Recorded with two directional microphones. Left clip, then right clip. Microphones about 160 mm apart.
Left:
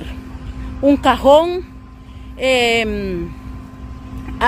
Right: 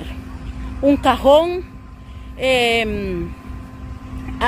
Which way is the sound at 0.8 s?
20° left (ahead or behind).